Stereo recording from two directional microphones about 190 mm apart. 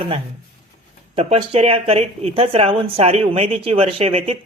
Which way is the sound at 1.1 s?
30° right (ahead or behind).